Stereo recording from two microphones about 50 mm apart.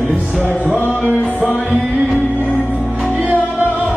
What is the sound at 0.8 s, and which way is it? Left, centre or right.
Music, left.